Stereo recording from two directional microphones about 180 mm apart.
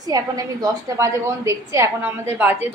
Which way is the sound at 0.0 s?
20° right (ahead or behind).